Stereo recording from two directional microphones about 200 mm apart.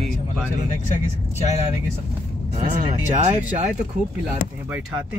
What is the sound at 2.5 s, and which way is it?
Speech, 35° right (ahead or behind).